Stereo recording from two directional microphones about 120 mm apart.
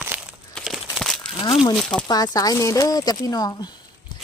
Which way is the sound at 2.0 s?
35° left (ahead or behind).